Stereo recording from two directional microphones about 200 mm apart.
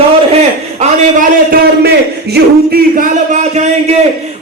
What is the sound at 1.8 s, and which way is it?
Speech, 50° right (ahead or behind).